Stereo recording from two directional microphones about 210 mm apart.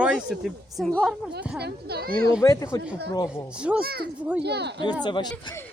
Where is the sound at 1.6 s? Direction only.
50° right (ahead or behind).